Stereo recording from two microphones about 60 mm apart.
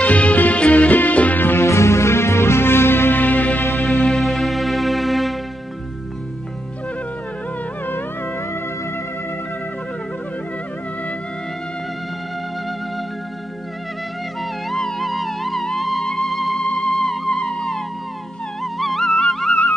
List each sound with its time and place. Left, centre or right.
0.0 s music: left
1.6 s music: left
4.2 s music: centre
14.4 s music: centre